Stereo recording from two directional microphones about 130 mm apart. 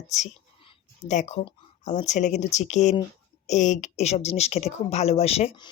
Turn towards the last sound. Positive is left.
turn(degrees=55)  # may be behind; listen again after turning